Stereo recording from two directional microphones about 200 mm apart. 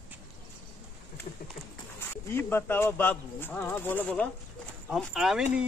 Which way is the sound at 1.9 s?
10° left (ahead or behind).